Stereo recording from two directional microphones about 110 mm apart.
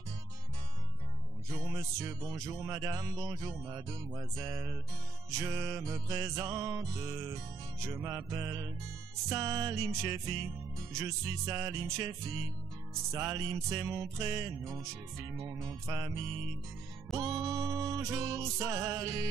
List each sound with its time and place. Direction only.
1.5 s music: 30° right (ahead or behind)
5.3 s music: 30° right (ahead or behind)
8.3 s music: 30° right (ahead or behind)
13.1 s music: 25° right (ahead or behind)